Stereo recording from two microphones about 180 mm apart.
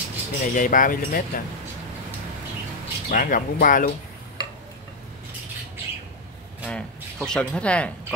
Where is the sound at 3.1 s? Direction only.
50° left (ahead or behind).